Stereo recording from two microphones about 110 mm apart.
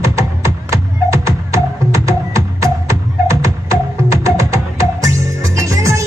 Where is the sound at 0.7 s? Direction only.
30° right (ahead or behind).